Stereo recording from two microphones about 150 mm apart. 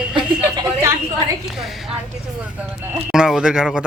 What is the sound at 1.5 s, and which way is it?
Speech, centre (ahead or behind).